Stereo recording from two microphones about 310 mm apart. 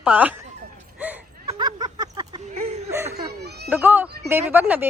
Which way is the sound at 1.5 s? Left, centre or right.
Centre.